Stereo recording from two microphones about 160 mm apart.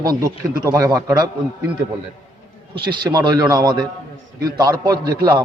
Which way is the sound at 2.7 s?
30° right (ahead or behind).